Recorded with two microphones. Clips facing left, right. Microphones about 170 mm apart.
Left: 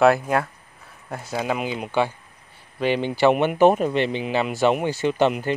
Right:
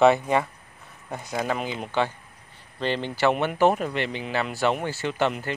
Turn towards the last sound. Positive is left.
turn(degrees=15)  # may be behind; listen again after turning